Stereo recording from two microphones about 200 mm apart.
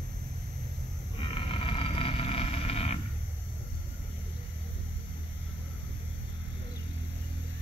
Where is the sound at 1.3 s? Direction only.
25° left (ahead or behind).